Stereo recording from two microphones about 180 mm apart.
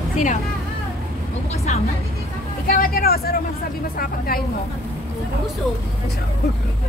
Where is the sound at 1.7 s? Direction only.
40° left (ahead or behind).